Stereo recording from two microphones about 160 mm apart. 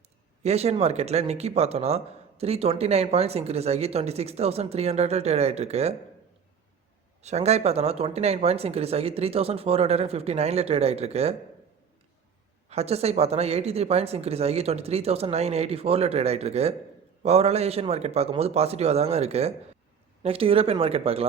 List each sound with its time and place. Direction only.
0.4 s speech: 40° right (ahead or behind)
7.2 s speech: 45° right (ahead or behind)
12.6 s speech: 40° right (ahead or behind)